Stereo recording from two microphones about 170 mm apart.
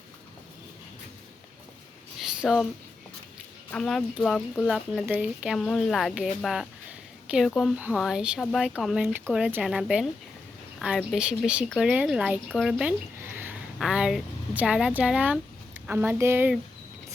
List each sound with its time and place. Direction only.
2.1 s a sound: 5° right (ahead or behind)
3.7 s speech: 5° left (ahead or behind)
5.0 s speech: 10° right (ahead or behind)
5.5 s speech: 5° left (ahead or behind)
12.5 s a sound: centre (ahead or behind)
13.7 s speech: 5° right (ahead or behind)